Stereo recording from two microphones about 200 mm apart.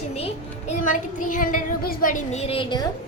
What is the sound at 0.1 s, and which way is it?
Speech, 30° left (ahead or behind).